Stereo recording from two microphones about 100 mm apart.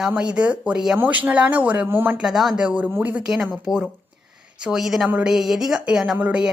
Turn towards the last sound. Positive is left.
turn(degrees=-10)  # may be behind; listen again after turning